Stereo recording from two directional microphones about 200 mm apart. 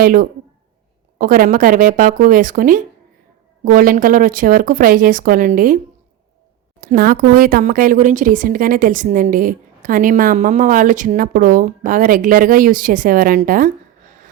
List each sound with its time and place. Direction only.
0.0 s speech: 45° right (ahead or behind)
6.8 s speech: 45° right (ahead or behind)